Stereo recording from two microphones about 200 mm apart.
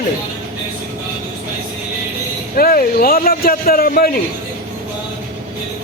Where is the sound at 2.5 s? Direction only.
45° left (ahead or behind).